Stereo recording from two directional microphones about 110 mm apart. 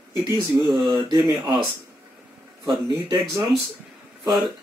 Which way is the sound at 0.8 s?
45° right (ahead or behind).